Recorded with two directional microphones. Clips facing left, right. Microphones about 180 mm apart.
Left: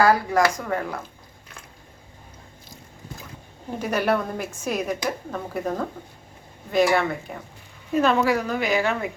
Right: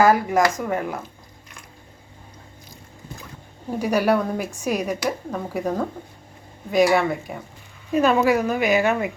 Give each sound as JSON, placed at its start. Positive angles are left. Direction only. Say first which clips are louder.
{"t": 0.0, "sound": "speech", "louder": "right 2 dB", "side_deg": -20}
{"t": 3.8, "sound": "speech", "louder": "right 3 dB", "side_deg": -10}